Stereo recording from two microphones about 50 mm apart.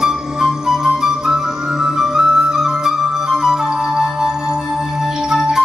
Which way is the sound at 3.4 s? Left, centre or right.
Centre.